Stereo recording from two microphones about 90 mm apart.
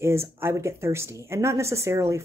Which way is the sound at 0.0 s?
30° right (ahead or behind).